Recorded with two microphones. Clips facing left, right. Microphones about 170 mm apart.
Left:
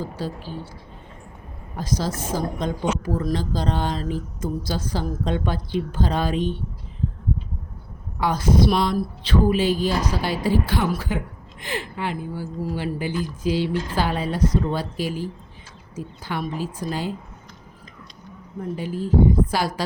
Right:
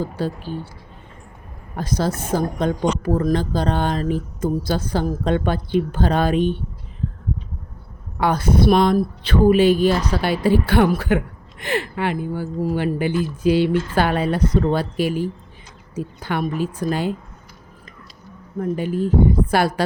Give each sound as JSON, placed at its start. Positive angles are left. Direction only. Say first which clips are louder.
{"t": 0.0, "sound": "speech", "louder": "right 5 dB", "side_deg": -60}
{"t": 1.7, "sound": "speech", "louder": "right 4 dB", "side_deg": -60}
{"t": 8.2, "sound": "speech", "louder": "right 2 dB", "side_deg": -60}
{"t": 18.8, "sound": "speech", "louder": "right 1 dB", "side_deg": -60}